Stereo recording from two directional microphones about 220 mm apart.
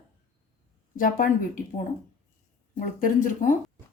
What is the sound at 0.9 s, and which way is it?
Speech, 40° left (ahead or behind).